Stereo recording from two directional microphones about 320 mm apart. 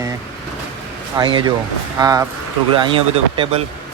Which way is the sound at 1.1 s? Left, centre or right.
Centre.